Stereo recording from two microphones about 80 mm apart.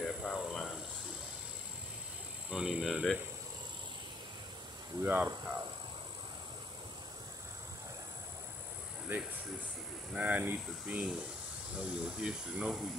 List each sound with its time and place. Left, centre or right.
0.0 s a sound: centre
2.5 s speech: centre
5.0 s speech: right
10.1 s speech: centre